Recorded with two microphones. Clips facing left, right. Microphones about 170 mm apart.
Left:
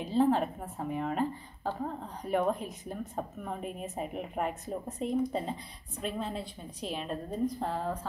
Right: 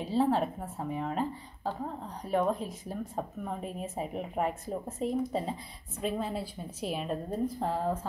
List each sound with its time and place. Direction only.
0.0 s a woman's voice: 5° right (ahead or behind)